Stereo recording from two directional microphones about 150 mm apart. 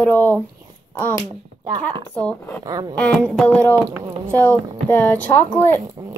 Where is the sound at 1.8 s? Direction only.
10° left (ahead or behind).